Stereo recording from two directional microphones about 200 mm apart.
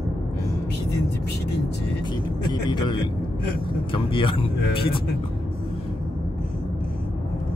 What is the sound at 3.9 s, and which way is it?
Speech, 25° left (ahead or behind).